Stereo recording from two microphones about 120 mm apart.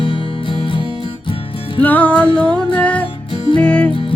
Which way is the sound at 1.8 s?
15° left (ahead or behind).